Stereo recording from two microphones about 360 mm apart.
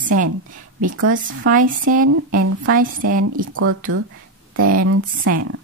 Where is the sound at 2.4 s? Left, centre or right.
Right.